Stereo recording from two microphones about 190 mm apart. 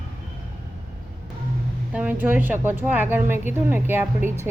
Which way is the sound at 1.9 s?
10° right (ahead or behind).